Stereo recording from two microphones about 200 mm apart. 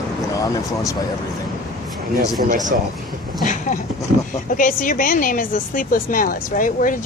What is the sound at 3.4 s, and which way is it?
A woman's voice, 40° left (ahead or behind).